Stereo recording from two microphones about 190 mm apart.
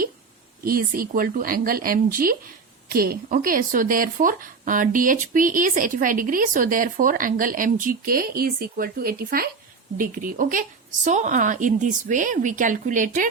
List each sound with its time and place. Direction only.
0.6 s speech: 50° right (ahead or behind)